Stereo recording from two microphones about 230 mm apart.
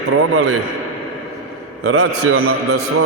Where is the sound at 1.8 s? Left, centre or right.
Right.